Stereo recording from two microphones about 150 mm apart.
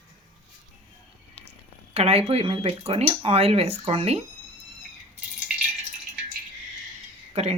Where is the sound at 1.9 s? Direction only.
40° right (ahead or behind).